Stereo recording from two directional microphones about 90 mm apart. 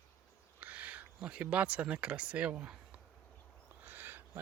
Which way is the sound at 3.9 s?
20° right (ahead or behind).